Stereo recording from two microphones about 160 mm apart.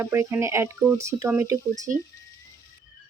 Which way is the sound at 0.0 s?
15° right (ahead or behind).